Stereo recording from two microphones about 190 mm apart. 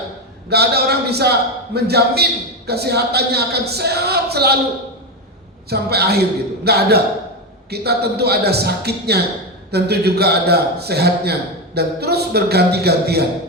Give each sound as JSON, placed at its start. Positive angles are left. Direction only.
{"t": 0.5, "sound": "a man's voice", "side_deg": -55}
{"t": 5.6, "sound": "a man's voice", "side_deg": -55}